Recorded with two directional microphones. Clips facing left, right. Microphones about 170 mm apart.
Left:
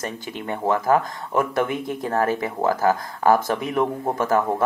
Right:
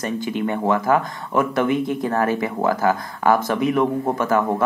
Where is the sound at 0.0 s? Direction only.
35° left (ahead or behind).